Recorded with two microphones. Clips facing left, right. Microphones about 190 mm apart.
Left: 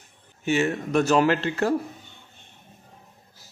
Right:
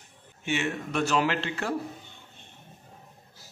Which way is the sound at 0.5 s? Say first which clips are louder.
Left 7 dB; 40° left (ahead or behind).